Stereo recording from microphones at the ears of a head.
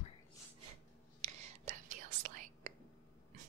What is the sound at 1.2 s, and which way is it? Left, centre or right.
Whispering, right.